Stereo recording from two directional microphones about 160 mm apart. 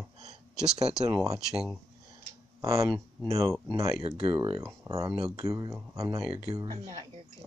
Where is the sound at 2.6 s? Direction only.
20° right (ahead or behind).